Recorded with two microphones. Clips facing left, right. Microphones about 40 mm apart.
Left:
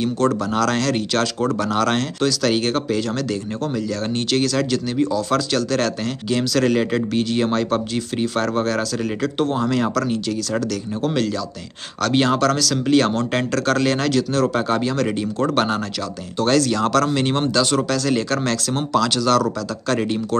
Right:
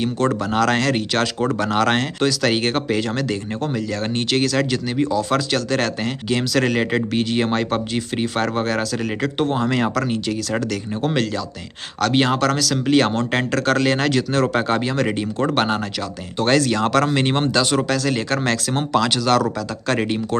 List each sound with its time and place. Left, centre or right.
0.0 s speech: centre